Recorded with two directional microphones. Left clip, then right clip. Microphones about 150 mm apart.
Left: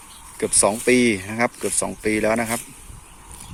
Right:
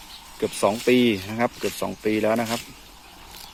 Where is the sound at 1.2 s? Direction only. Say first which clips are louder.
Left 2 dB; 10° left (ahead or behind).